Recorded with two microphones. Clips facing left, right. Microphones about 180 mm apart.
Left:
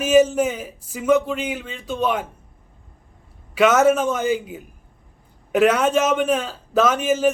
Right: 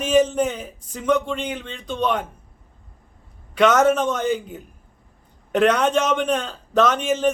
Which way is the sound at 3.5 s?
5° left (ahead or behind).